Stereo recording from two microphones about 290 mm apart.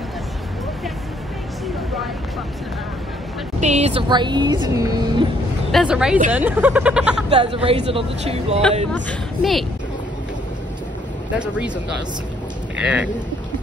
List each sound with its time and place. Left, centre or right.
3.6 s speech: right
5.7 s speech: centre
7.2 s speech: centre
8.9 s speech: centre
11.3 s speech: centre
12.7 s speech: centre